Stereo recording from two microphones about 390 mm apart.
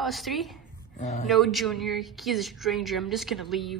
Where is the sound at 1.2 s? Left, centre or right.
Centre.